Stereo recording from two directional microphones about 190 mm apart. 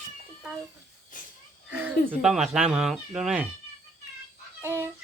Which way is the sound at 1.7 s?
10° right (ahead or behind).